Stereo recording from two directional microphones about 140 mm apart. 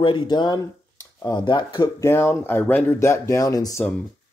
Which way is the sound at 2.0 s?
15° left (ahead or behind).